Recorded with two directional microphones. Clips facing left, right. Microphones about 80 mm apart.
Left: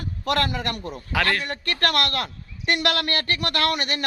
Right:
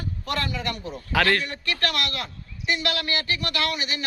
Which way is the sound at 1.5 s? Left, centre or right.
Left.